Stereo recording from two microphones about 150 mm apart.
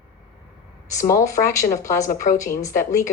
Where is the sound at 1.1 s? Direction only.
20° left (ahead or behind).